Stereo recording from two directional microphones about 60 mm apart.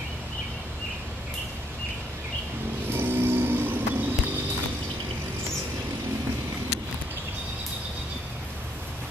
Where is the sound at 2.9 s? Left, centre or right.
Right.